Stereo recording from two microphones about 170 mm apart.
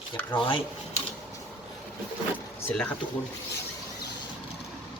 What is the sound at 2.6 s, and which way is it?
Speech, 10° left (ahead or behind).